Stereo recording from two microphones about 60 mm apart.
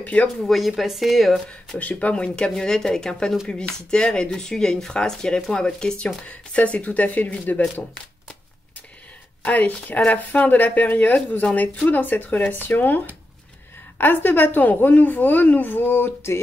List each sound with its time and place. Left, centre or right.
0.0 s speech: left
0.5 s speech: centre
1.8 s speech: left
9.4 s a woman's voice: left